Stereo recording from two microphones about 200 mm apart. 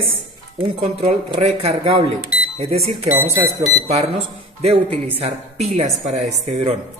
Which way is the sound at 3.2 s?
15° right (ahead or behind).